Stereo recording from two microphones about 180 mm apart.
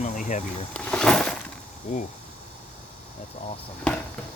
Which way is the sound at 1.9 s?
45° left (ahead or behind).